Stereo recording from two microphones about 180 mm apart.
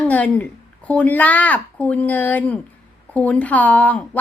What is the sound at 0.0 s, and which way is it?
A woman's voice, 10° left (ahead or behind).